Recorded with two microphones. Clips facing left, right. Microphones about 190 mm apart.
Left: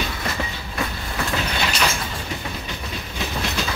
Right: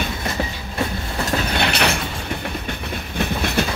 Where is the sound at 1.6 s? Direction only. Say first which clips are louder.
Right 3 dB; 65° right (ahead or behind).